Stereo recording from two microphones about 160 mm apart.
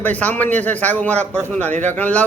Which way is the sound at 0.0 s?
10° left (ahead or behind).